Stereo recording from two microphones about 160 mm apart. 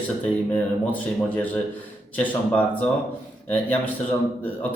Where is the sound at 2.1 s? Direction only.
10° left (ahead or behind).